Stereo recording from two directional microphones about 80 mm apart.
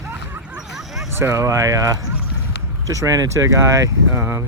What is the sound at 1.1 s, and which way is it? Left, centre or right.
Speech, right.